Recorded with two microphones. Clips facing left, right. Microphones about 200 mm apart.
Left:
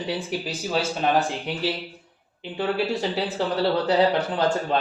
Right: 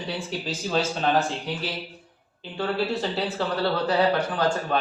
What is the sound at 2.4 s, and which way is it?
A man's voice, 15° left (ahead or behind).